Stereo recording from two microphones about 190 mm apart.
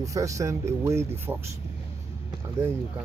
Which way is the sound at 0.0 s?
15° right (ahead or behind).